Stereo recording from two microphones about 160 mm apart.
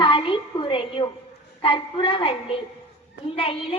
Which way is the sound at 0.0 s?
30° left (ahead or behind).